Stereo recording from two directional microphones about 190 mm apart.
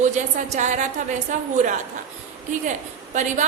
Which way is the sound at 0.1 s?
40° right (ahead or behind).